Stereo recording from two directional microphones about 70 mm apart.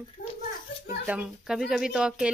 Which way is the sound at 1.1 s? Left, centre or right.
Centre.